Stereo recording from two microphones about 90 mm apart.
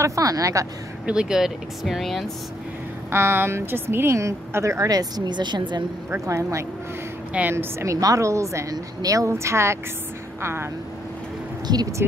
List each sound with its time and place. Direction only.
0.0 s a woman's voice: 40° right (ahead or behind)
1.0 s speech: 10° right (ahead or behind)
3.1 s a woman's voice: 30° right (ahead or behind); by 5.9 s 55° right (ahead or behind)
6.2 s a woman's voice: 35° right (ahead or behind)
11.6 s speech: 50° right (ahead or behind)